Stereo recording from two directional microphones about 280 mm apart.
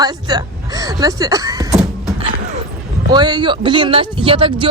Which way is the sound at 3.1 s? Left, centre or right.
Centre.